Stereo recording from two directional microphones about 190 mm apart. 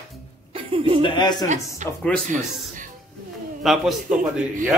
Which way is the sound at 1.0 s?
25° left (ahead or behind).